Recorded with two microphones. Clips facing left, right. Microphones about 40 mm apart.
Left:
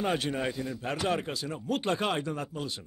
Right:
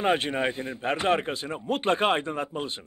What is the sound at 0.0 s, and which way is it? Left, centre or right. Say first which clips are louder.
Speech: right 5 dB; right.